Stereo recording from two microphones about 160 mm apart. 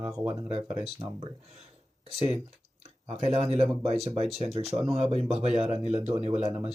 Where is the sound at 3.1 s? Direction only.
40° right (ahead or behind).